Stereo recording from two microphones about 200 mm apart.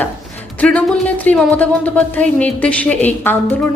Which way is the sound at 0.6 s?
5° left (ahead or behind).